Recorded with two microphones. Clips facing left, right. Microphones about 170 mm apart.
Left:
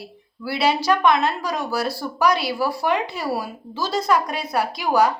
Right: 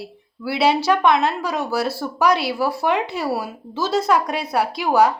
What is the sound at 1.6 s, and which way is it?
A woman's voice, 25° right (ahead or behind).